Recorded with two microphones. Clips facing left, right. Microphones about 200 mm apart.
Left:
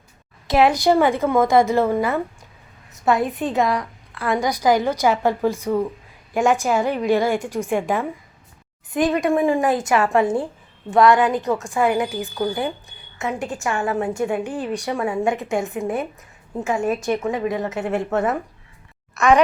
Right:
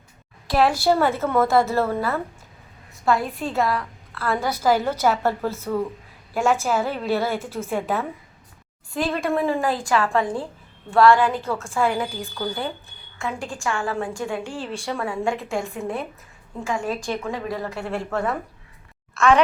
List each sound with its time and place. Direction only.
0.4 s a woman's voice: 20° left (ahead or behind)
16.6 s a woman's voice: 20° left (ahead or behind)